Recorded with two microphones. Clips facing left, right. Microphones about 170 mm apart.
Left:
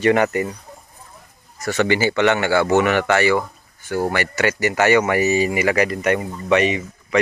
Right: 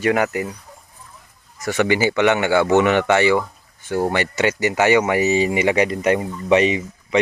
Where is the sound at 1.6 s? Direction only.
15° right (ahead or behind).